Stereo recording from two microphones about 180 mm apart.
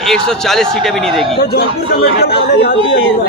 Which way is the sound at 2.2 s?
60° left (ahead or behind).